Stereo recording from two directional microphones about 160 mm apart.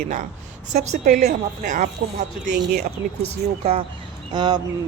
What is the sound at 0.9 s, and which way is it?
A woman's voice, 55° right (ahead or behind).